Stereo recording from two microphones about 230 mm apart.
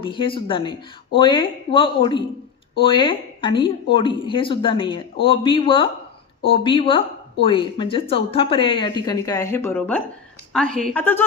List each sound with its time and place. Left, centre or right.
0.0 s a woman's voice: left